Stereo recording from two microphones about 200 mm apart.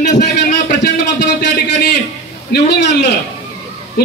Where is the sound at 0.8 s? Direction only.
55° left (ahead or behind).